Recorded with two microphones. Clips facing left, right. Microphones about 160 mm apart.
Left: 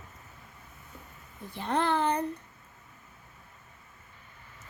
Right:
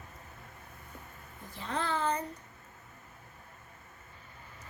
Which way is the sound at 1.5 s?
65° left (ahead or behind).